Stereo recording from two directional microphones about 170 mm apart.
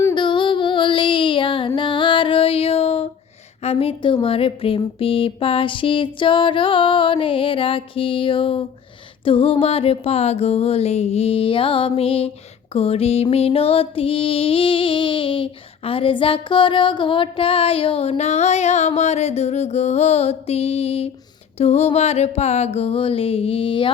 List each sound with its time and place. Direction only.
0.1 s female singing: 30° left (ahead or behind)
3.6 s music: 35° left (ahead or behind)